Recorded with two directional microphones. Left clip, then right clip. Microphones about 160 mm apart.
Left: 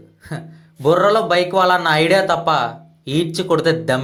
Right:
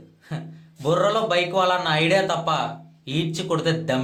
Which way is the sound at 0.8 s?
35° left (ahead or behind).